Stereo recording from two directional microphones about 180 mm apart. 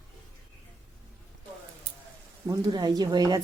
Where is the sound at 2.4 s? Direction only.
20° right (ahead or behind).